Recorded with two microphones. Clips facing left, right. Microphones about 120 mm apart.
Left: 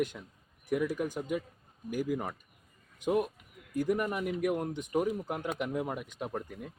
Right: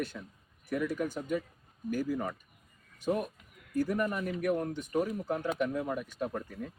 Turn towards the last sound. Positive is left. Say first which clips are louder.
# right 2 dB
turn(degrees=15)  # may be behind; listen again after turning